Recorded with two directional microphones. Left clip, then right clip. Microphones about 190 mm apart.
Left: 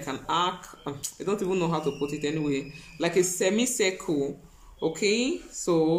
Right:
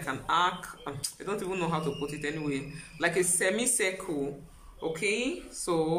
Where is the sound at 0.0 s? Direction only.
15° left (ahead or behind).